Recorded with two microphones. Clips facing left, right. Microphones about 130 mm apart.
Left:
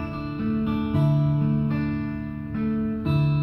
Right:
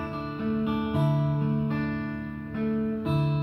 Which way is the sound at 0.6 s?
5° right (ahead or behind).